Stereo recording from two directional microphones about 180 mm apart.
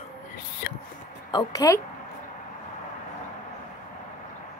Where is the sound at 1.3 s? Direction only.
20° left (ahead or behind).